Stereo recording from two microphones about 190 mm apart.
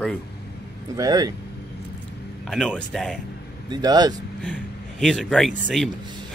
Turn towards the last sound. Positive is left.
turn(degrees=0)  # may be behind; listen again after turning